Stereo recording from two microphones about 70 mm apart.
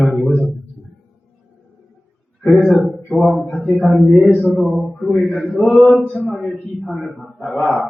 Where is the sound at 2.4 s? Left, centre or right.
Centre.